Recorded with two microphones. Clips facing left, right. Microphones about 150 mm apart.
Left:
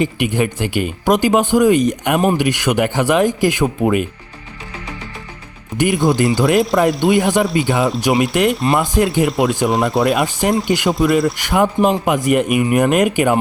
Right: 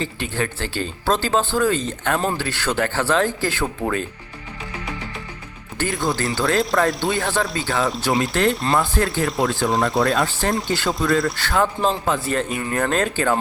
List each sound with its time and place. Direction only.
0.0 s speech: 15° left (ahead or behind)
5.7 s speech: 20° left (ahead or behind)
9.6 s speech: centre (ahead or behind)
10.0 s speech: 20° left (ahead or behind)